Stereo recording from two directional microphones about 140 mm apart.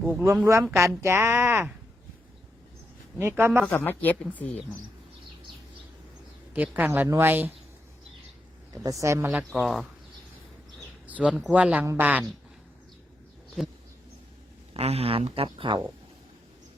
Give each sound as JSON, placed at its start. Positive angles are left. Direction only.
{"t": 0.4, "sound": "speech", "side_deg": -20}
{"t": 3.2, "sound": "speech", "side_deg": -20}
{"t": 3.7, "sound": "a woman's voice", "side_deg": 15}
{"t": 6.5, "sound": "speech", "side_deg": -10}
{"t": 8.7, "sound": "speech", "side_deg": -25}
{"t": 9.6, "sound": "speech", "side_deg": 0}
{"t": 11.0, "sound": "speech", "side_deg": -10}
{"t": 14.7, "sound": "speech", "side_deg": -45}